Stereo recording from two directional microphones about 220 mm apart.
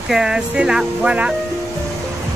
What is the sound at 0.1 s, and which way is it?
Speech, 5° right (ahead or behind).